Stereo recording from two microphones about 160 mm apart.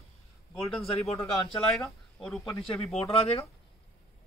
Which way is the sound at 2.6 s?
35° left (ahead or behind).